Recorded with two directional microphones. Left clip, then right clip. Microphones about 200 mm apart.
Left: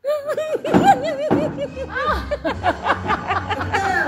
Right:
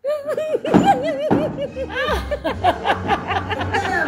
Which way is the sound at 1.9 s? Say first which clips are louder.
Left 1 dB; 35° right (ahead or behind).